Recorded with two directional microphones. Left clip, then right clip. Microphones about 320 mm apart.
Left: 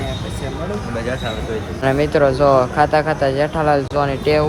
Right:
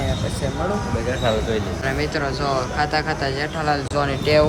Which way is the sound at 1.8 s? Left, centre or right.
Centre.